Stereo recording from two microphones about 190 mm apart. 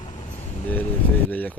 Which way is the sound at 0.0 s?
35° left (ahead or behind).